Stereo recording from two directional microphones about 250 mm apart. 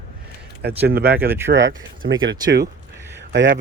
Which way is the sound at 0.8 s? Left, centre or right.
Right.